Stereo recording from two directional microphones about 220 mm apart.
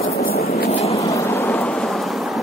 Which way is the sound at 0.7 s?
30° left (ahead or behind).